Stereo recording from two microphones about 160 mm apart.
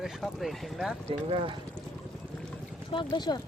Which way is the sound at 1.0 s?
35° right (ahead or behind).